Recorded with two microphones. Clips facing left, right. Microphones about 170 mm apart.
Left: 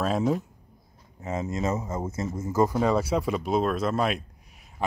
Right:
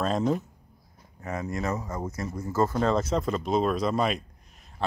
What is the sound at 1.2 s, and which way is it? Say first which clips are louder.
Speech: left 2 dB; 25° left (ahead or behind).